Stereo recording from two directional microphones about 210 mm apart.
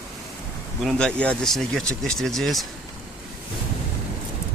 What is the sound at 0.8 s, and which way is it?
Speech, centre (ahead or behind).